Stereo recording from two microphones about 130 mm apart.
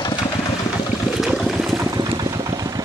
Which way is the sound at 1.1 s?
5° right (ahead or behind).